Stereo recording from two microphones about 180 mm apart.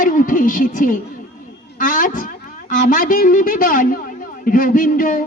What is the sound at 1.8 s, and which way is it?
Speech, 50° left (ahead or behind).